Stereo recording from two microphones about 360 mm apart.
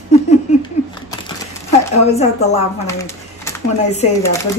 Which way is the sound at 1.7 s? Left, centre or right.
Centre.